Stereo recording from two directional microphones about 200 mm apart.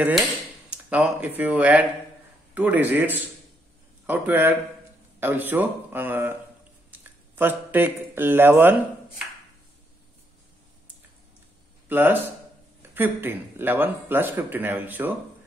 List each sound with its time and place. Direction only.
0.7 s a man's voice: 5° right (ahead or behind)
11.9 s speech: 10° right (ahead or behind)